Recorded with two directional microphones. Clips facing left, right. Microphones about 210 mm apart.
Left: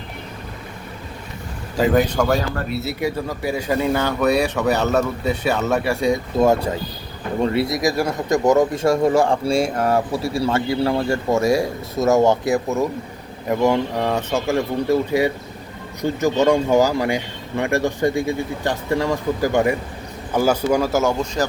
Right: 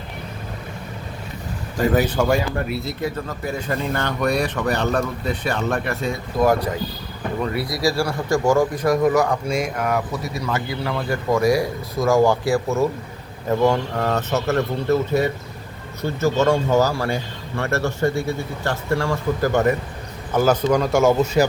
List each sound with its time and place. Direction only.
1.8 s speech: 5° right (ahead or behind)
3.0 s speech: 10° left (ahead or behind)
6.4 s speech: 25° left (ahead or behind); by 21.4 s 5° right (ahead or behind)